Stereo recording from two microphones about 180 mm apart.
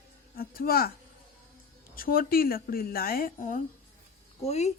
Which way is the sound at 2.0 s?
55° left (ahead or behind).